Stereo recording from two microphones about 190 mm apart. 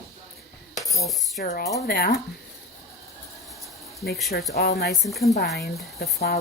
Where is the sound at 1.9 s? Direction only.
50° left (ahead or behind).